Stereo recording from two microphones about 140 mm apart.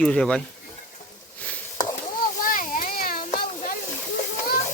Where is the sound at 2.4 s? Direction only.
75° left (ahead or behind).